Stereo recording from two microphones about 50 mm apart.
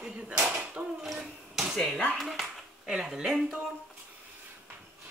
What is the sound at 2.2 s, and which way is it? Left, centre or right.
Speech, centre.